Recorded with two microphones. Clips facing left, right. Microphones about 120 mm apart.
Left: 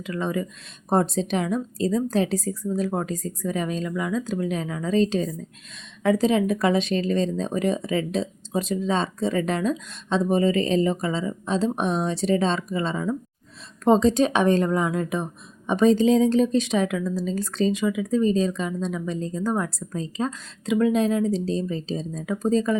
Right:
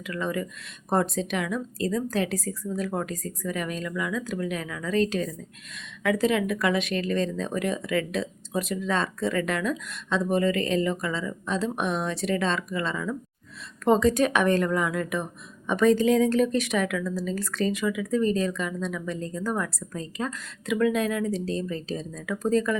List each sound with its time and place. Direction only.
0.0 s speech: 25° left (ahead or behind)